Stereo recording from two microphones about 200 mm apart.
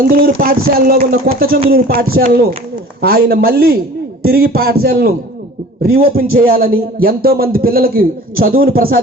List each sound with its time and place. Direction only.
0.2 s a man's voice: 45° right (ahead or behind)